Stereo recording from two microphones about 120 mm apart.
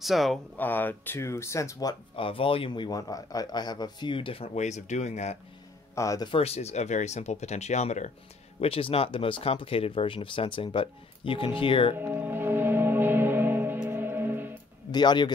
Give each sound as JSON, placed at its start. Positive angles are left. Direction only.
{"t": 0.0, "sound": "speech", "side_deg": 0}
{"t": 0.6, "sound": "speech", "side_deg": 15}
{"t": 2.1, "sound": "a man's voice", "side_deg": 50}
{"t": 4.6, "sound": "speech", "side_deg": 75}
{"t": 5.9, "sound": "speech", "side_deg": 25}
{"t": 6.2, "sound": "speech", "side_deg": 55}
{"t": 8.5, "sound": "speech", "side_deg": 50}
{"t": 12.0, "sound": "music", "side_deg": -15}
{"t": 14.9, "sound": "a man's voice", "side_deg": 35}